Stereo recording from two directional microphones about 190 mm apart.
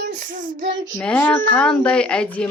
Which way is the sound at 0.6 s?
80° right.